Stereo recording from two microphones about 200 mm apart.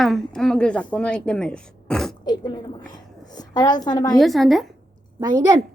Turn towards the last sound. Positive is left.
turn(degrees=-20)  # may be behind; listen again after turning